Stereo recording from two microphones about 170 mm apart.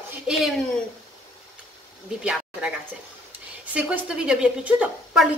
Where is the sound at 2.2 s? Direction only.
5° right (ahead or behind).